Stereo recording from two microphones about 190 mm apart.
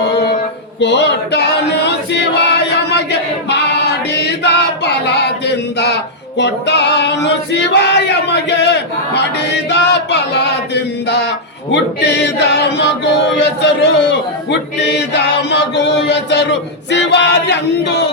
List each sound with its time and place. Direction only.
0.8 s choir: 65° left (ahead or behind)
3.5 s singing: 65° left (ahead or behind)
6.4 s female singing: 65° left (ahead or behind)